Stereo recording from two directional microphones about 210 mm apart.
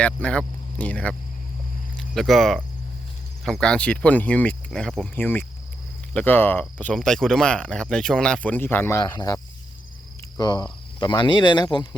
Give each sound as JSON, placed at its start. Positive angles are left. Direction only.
{"t": 0.0, "sound": "speech", "side_deg": 5}